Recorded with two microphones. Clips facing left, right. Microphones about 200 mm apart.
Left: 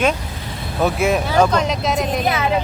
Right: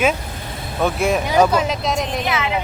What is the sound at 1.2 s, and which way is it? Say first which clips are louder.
Speech: even; 10° right (ahead or behind).